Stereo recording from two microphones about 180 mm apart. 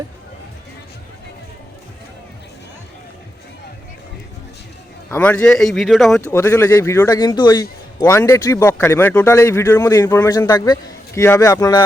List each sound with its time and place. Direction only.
5.1 s speech: 10° left (ahead or behind)
6.2 s a man's voice: 15° left (ahead or behind)